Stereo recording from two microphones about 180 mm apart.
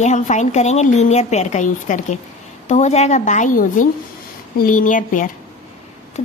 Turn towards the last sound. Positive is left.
turn(degrees=40)  # may be behind; listen again after turning